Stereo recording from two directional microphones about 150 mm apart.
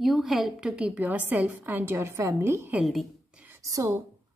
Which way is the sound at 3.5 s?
20° right (ahead or behind).